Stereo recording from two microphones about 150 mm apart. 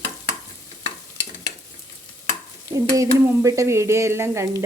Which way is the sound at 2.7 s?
20° right (ahead or behind).